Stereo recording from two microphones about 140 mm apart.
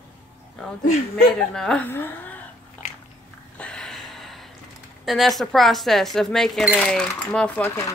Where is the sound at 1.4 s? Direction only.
5° left (ahead or behind).